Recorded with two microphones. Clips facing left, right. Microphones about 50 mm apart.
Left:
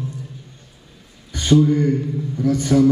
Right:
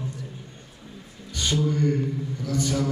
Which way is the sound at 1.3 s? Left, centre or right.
Left.